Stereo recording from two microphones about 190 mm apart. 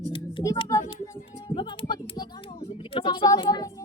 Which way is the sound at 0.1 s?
25° left (ahead or behind).